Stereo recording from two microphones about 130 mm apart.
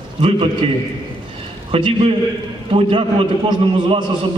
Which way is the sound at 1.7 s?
40° right (ahead or behind).